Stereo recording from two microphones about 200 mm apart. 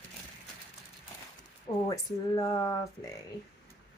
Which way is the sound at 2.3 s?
15° left (ahead or behind).